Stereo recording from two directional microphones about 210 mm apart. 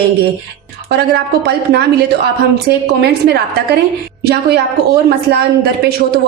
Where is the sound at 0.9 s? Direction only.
50° right (ahead or behind).